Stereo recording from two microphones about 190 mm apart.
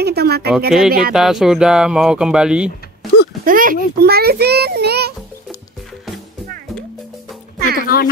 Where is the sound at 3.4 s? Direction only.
45° right (ahead or behind).